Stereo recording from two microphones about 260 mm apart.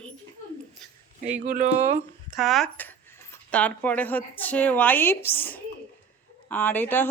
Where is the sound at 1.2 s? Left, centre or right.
Right.